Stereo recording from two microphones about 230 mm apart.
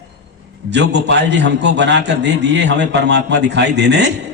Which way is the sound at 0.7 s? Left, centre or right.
Right.